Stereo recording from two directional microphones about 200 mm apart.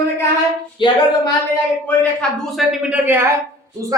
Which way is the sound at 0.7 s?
25° left (ahead or behind).